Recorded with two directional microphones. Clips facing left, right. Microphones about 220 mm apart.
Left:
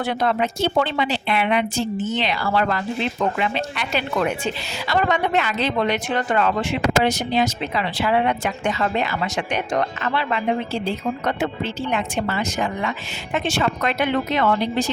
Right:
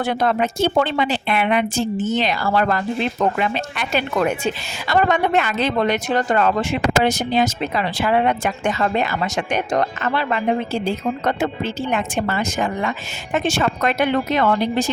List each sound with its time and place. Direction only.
0.0 s speech: 45° right (ahead or behind)